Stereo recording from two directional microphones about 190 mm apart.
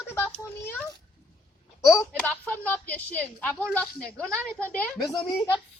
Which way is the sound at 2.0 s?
10° left (ahead or behind).